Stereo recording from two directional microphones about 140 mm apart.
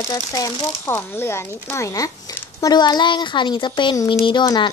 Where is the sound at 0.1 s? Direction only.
25° left (ahead or behind).